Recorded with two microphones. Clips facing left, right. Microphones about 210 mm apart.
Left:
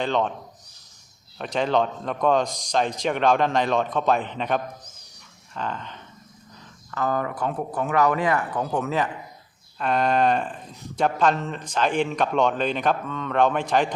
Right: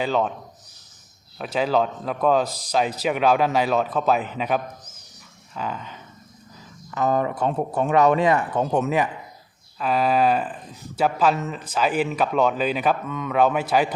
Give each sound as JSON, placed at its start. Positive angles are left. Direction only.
{"t": 0.0, "sound": "speech", "side_deg": -5}
{"t": 1.4, "sound": "speech", "side_deg": -5}
{"t": 6.9, "sound": "speech", "side_deg": -20}
{"t": 9.7, "sound": "speech", "side_deg": -5}